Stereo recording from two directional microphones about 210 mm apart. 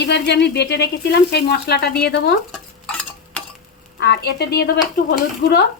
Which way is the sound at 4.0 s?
55° left (ahead or behind).